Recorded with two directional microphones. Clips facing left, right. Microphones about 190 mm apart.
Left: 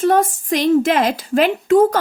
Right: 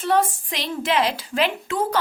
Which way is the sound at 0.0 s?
45° left (ahead or behind).